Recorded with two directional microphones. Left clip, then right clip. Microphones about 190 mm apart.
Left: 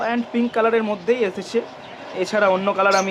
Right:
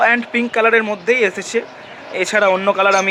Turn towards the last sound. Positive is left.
turn(degrees=-30)  # may be behind; listen again after turning